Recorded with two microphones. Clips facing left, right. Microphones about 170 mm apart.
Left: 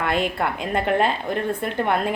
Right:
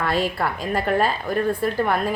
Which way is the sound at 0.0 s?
20° left (ahead or behind).